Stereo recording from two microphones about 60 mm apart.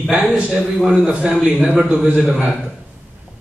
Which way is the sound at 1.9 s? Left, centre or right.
Right.